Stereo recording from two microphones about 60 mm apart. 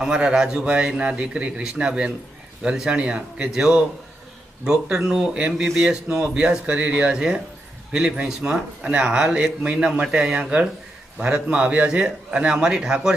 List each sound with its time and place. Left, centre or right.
0.0 s a man's voice: centre